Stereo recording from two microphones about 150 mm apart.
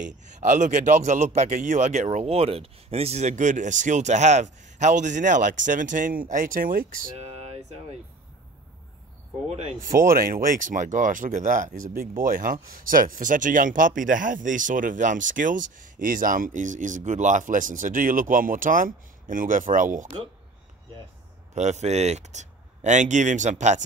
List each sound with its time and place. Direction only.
0.0 s speech: 55° right (ahead or behind)
2.1 s speech: 40° right (ahead or behind); by 7.1 s 65° right (ahead or behind)
7.2 s a sound: 45° right (ahead or behind)
9.5 s speech: 45° right (ahead or behind)
9.9 s speech: 70° right (ahead or behind)
21.5 s speech: 50° right (ahead or behind)